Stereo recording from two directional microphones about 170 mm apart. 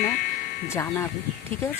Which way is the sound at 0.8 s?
15° left (ahead or behind).